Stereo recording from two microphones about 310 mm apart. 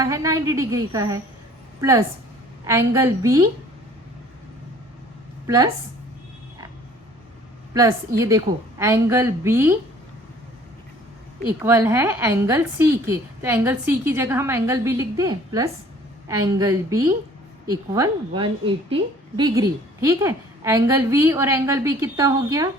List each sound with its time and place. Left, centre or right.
0.0 s a woman's voice: centre
5.5 s a woman's voice: centre
7.7 s a woman's voice: centre
11.4 s a woman's voice: centre